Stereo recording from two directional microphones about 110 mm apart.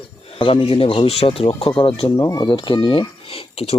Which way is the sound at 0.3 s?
55° left (ahead or behind).